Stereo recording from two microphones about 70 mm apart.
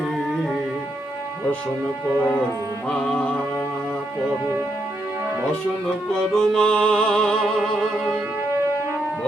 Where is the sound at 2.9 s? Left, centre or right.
Centre.